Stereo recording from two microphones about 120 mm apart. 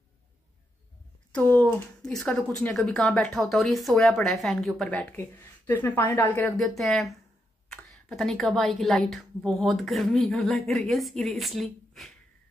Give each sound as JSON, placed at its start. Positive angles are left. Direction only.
{"t": 1.3, "sound": "a woman's voice", "side_deg": 15}
{"t": 4.8, "sound": "speech", "side_deg": 15}
{"t": 6.6, "sound": "a woman's voice", "side_deg": 0}